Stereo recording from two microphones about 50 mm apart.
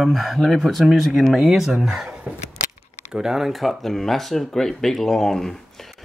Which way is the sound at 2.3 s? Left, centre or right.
Right.